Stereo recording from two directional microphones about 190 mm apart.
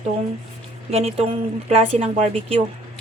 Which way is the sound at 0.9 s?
30° right (ahead or behind).